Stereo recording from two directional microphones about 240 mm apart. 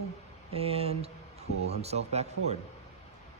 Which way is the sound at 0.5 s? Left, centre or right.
Right.